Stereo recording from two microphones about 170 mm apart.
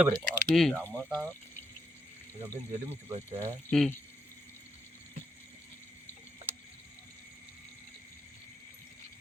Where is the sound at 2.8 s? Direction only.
35° right (ahead or behind).